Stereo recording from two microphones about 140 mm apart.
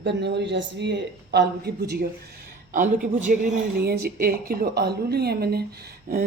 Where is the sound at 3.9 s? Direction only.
90° right.